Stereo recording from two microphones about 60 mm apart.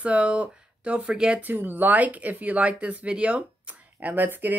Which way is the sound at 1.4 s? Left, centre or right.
Right.